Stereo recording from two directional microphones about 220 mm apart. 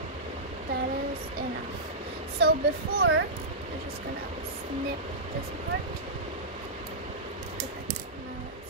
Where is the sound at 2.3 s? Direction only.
45° right (ahead or behind).